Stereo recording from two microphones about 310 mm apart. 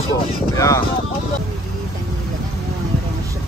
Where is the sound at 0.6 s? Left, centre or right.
Centre.